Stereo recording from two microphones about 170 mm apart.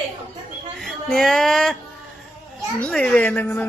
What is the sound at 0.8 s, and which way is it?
Music, centre (ahead or behind).